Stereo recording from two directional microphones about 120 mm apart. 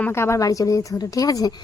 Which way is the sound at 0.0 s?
20° left (ahead or behind).